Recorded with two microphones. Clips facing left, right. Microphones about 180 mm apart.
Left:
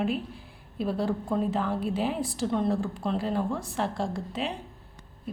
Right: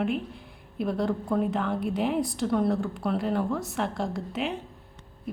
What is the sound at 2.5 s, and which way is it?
Speech, 20° left (ahead or behind).